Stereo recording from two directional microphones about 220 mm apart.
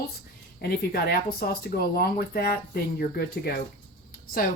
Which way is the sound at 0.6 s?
45° left (ahead or behind).